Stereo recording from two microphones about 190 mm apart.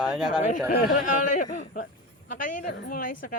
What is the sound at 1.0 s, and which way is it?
Speech, 45° left (ahead or behind).